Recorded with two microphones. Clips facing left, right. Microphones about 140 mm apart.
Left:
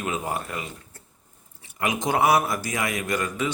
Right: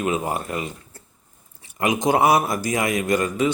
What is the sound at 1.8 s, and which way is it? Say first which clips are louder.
Speech: right 4 dB; 15° right (ahead or behind).